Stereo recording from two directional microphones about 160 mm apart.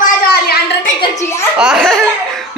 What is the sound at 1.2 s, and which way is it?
Speech, 15° left (ahead or behind).